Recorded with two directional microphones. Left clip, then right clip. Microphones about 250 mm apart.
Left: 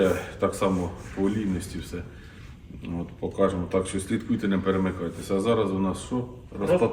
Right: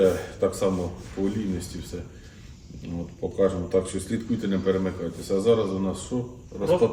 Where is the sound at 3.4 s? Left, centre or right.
Centre.